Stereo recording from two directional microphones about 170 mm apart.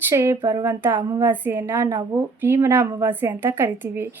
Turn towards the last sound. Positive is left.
turn(degrees=-10)  # may be behind; listen again after turning